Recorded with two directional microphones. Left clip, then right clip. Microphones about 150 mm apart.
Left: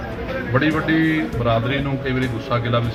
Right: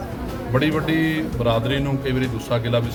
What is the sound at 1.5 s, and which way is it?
A man's voice, 20° right (ahead or behind).